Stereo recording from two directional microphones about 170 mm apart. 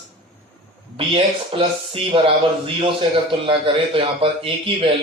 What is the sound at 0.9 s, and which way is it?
Speech, 30° right (ahead or behind).